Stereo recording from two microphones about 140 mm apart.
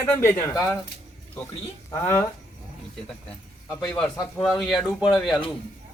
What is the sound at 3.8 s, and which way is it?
Speech, 5° left (ahead or behind).